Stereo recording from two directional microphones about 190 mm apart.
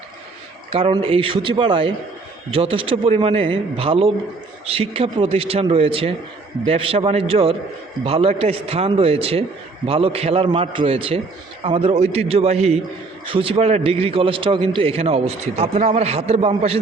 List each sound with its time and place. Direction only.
0.7 s a man's voice: 30° right (ahead or behind)